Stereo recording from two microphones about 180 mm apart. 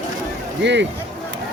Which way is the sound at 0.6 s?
75° right (ahead or behind).